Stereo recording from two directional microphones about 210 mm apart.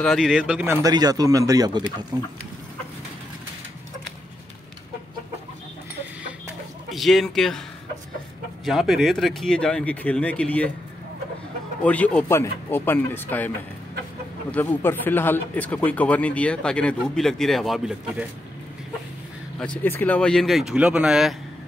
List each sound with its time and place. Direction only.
0.0 s speech: centre (ahead or behind)
0.8 s speech: 20° right (ahead or behind)
6.9 s speech: centre (ahead or behind)
8.6 s speech: centre (ahead or behind)
11.8 s speech: 5° left (ahead or behind)
14.5 s speech: 10° left (ahead or behind)
19.6 s speech: 5° left (ahead or behind)